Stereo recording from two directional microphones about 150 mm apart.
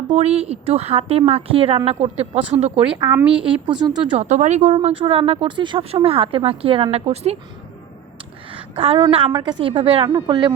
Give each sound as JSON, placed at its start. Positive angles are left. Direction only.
{"t": 0.1, "sound": "a woman's voice", "side_deg": -45}
{"t": 3.1, "sound": "a woman's voice", "side_deg": -10}
{"t": 3.4, "sound": "a woman's voice", "side_deg": -30}
{"t": 4.2, "sound": "a woman's voice", "side_deg": -50}
{"t": 4.9, "sound": "a woman's voice", "side_deg": -40}
{"t": 8.5, "sound": "a sound", "side_deg": -40}
{"t": 9.0, "sound": "a woman's voice", "side_deg": -35}
{"t": 10.1, "sound": "speech", "side_deg": -25}